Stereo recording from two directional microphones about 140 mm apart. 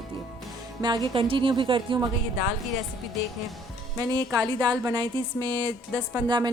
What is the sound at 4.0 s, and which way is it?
Speech, 25° right (ahead or behind).